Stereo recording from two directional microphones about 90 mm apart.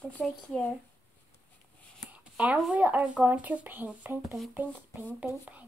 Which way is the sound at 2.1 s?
15° right (ahead or behind).